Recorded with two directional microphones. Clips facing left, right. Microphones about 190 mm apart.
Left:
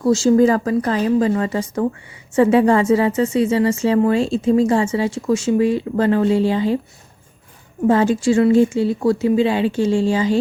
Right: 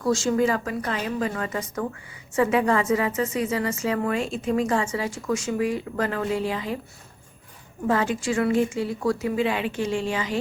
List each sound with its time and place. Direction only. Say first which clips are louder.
0.0 s a woman's voice: left 8 dB; 25° left (ahead or behind)
7.9 s a woman's voice: left 8 dB; 30° left (ahead or behind)